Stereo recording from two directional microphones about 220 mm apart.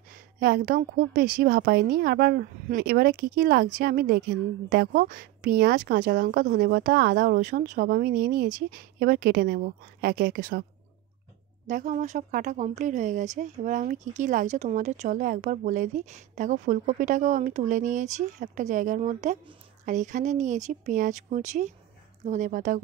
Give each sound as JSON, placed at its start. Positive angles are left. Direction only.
{"t": 0.4, "sound": "speech", "side_deg": -40}
{"t": 11.6, "sound": "speech", "side_deg": -35}